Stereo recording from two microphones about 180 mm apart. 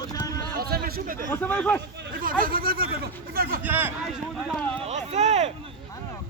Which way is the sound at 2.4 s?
55° right (ahead or behind).